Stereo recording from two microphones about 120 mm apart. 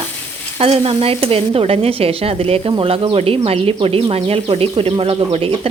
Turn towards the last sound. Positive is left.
turn(degrees=-50)  # may be behind; listen again after turning